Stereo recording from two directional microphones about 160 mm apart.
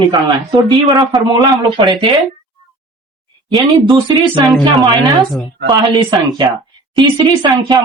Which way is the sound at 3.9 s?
30° right (ahead or behind).